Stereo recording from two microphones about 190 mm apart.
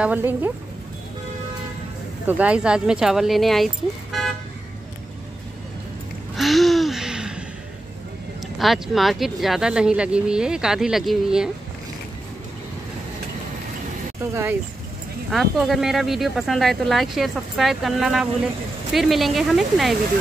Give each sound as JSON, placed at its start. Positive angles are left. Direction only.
{"t": 0.0, "sound": "speech", "side_deg": -10}
{"t": 2.2, "sound": "speech", "side_deg": -5}
{"t": 6.3, "sound": "a sound", "side_deg": 0}
{"t": 8.5, "sound": "speech", "side_deg": 0}
{"t": 14.2, "sound": "speech", "side_deg": -15}
{"t": 15.3, "sound": "speech", "side_deg": 0}